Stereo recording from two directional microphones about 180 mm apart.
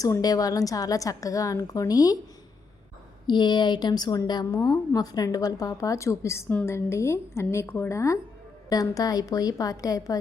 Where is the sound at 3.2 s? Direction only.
25° left (ahead or behind).